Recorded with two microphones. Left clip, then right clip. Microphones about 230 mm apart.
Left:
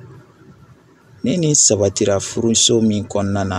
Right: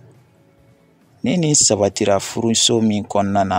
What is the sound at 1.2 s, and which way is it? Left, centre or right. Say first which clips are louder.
Speech: left 1 dB; right.